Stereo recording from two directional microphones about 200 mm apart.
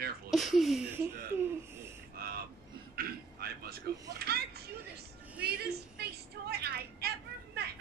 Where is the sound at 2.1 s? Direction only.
50° right (ahead or behind).